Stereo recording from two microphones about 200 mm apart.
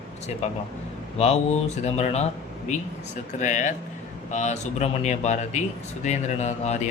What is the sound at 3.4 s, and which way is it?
Speech, 40° left (ahead or behind).